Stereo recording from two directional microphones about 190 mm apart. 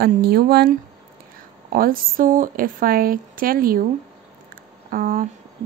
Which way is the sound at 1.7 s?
50° right (ahead or behind).